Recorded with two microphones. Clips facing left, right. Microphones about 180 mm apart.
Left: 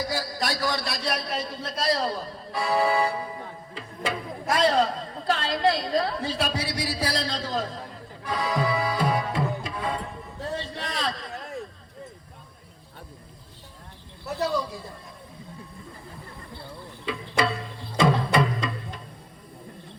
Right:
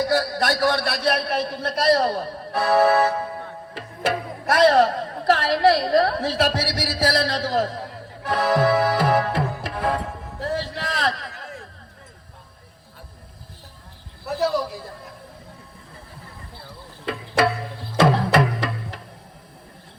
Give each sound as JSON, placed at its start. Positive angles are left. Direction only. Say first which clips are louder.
{"t": 0.0, "sound": "a man's voice", "louder": "right 8 dB", "side_deg": -65}
{"t": 7.0, "sound": "music", "louder": "right 10 dB", "side_deg": -75}
{"t": 10.9, "sound": "a sound", "louder": "right 4 dB", "side_deg": -75}
{"t": 14.3, "sound": "speech", "louder": "right 4 dB", "side_deg": 0}
{"t": 17.4, "sound": "music", "louder": "right 5 dB", "side_deg": -75}